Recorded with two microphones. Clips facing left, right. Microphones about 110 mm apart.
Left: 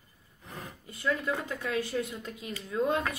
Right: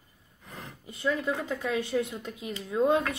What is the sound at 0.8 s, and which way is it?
A woman's voice, 20° right (ahead or behind).